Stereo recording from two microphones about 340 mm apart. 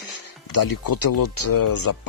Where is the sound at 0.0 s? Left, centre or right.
Left.